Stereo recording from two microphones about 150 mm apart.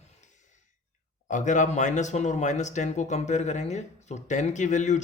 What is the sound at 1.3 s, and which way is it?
Speech, 55° left (ahead or behind).